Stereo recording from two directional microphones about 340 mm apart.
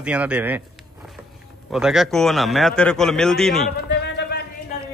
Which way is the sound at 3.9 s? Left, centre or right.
Left.